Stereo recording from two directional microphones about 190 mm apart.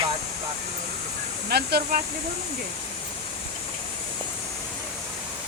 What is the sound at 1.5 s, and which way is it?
Speech, 55° right (ahead or behind).